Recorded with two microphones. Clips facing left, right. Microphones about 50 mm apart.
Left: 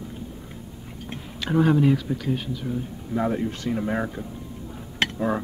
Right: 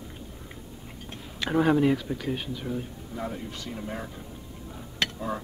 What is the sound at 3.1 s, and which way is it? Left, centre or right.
Speech, left.